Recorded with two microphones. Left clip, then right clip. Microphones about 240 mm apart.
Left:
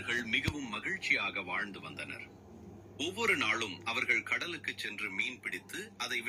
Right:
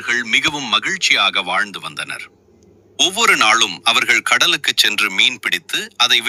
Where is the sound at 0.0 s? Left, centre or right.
Right.